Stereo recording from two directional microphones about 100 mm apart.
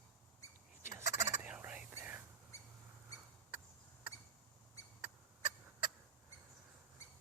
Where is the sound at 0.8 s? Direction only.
25° right (ahead or behind).